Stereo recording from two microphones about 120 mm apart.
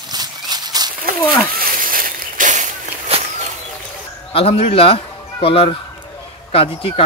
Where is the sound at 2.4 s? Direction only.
90° right.